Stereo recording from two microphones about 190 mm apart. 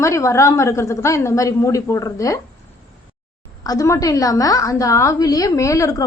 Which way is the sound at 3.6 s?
20° left (ahead or behind).